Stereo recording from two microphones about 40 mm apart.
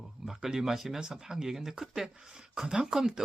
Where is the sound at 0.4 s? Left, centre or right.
Centre.